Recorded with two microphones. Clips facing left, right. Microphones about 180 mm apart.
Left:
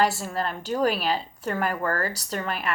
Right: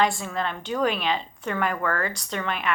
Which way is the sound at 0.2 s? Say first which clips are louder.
Even; 35° left (ahead or behind).